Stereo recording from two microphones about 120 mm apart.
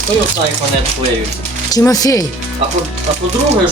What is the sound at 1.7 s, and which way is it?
Speech, 30° left (ahead or behind).